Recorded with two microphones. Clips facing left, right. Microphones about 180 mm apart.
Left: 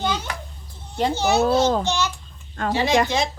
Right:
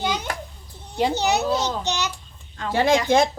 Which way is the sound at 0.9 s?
15° right (ahead or behind).